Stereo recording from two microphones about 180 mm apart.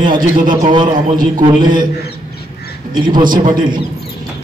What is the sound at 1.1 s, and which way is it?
Speech, 50° right (ahead or behind).